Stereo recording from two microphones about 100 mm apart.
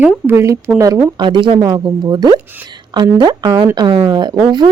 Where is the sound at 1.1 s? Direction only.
50° right (ahead or behind).